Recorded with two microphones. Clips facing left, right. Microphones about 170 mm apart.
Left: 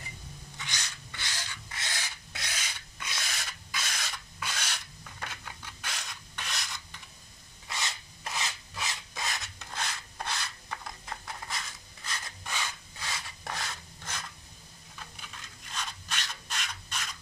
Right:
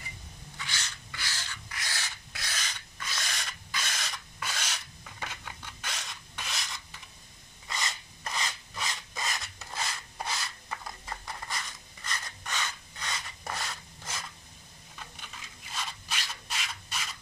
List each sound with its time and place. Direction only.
0.7 s rub: 20° left (ahead or behind)
3.2 s filing: 5° left (ahead or behind)
7.6 s rub: 5° left (ahead or behind)
15.7 s rub: 5° right (ahead or behind)